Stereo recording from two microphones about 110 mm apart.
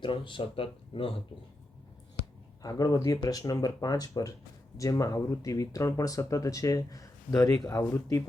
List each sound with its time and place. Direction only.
0.0 s speech: 50° left (ahead or behind)
2.6 s speech: 35° left (ahead or behind)